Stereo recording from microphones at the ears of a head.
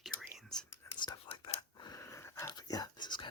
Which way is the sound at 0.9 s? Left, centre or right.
Left.